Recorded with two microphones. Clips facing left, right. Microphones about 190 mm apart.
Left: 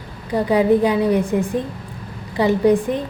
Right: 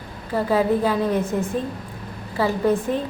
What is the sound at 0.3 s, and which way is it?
A woman's voice, 15° left (ahead or behind).